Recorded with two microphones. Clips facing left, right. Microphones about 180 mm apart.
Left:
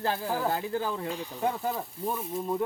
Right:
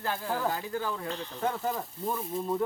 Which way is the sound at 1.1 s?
10° left (ahead or behind).